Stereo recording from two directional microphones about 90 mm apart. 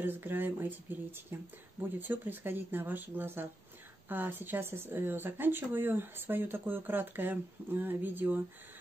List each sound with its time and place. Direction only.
0.0 s speech: 25° right (ahead or behind)